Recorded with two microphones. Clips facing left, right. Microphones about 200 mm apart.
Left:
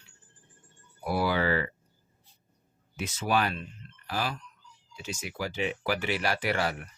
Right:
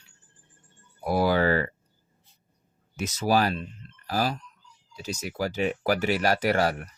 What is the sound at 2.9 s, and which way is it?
Speech, 40° right (ahead or behind).